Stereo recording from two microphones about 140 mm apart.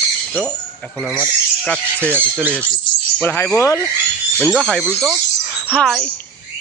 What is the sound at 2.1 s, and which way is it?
Speech, 15° right (ahead or behind).